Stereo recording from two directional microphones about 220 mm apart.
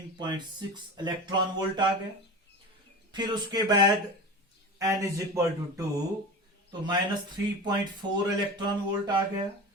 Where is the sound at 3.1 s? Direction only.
20° right (ahead or behind).